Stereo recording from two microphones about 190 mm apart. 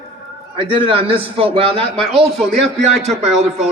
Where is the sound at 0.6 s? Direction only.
25° right (ahead or behind).